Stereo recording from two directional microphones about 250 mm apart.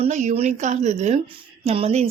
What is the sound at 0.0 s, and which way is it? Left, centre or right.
A woman's voice, right.